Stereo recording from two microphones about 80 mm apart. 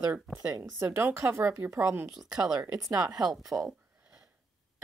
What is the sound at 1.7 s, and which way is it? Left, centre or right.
Speech, right.